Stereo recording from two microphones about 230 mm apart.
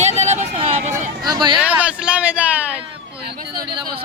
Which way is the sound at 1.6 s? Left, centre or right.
Centre.